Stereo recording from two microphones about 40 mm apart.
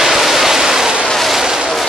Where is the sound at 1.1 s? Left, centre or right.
Centre.